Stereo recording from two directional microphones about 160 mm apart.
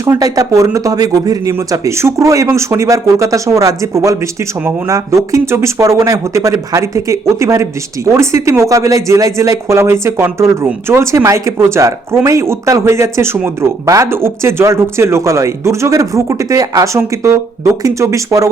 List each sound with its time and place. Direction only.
0.0 s a man's voice: 20° right (ahead or behind)